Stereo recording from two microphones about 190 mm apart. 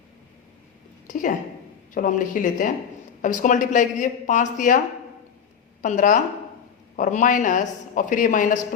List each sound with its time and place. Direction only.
1.1 s a woman's voice: 40° left (ahead or behind)
5.8 s a man's voice: 45° left (ahead or behind)